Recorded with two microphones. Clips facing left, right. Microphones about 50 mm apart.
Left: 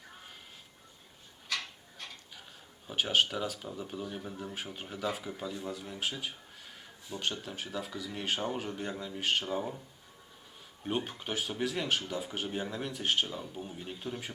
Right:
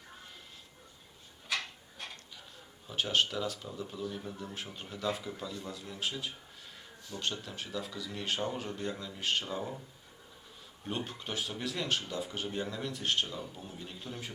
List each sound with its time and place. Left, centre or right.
1.5 s a sound: centre
2.8 s speech: centre
4.2 s speech: centre
10.8 s speech: centre
13.5 s speech: centre